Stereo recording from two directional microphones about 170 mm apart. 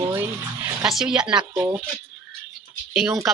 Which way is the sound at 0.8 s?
5° right (ahead or behind).